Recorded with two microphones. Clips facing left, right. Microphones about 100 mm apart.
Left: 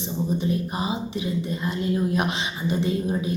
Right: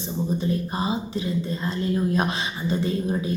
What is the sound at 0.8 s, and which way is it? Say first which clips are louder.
Speech: right 1 dB; 20° left (ahead or behind).